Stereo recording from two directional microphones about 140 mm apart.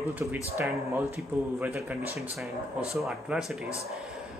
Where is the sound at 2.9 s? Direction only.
Centre (ahead or behind).